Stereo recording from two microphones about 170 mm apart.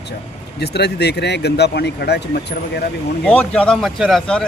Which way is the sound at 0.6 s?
75° left (ahead or behind).